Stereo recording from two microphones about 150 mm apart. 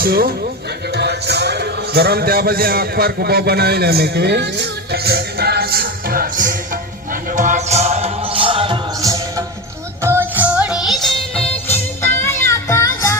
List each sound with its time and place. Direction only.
0.0 s a man's voice: 85° right
4.9 s music: 90° right; by 6.5 s 75° right (ahead or behind)
7.3 s music: 55° right (ahead or behind); by 9.1 s 30° right (ahead or behind)
10.0 s music: 15° right (ahead or behind); by 11.4 s centre (ahead or behind)
11.7 s music: 15° left (ahead or behind)